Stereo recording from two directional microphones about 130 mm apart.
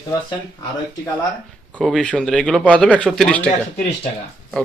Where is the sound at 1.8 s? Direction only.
5° left (ahead or behind).